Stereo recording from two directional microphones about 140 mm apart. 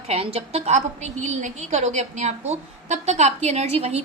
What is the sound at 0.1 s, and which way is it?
A woman's voice, 45° right (ahead or behind).